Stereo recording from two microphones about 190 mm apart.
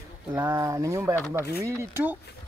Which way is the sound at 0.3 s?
15° right (ahead or behind).